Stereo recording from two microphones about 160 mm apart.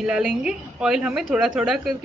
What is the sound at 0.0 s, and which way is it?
A woman's voice, 5° right (ahead or behind).